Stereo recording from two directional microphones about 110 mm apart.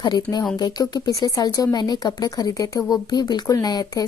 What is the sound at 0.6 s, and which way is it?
A woman's voice, 40° left (ahead or behind).